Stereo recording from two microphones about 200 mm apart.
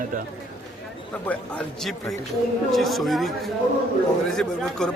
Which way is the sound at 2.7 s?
Centre (ahead or behind).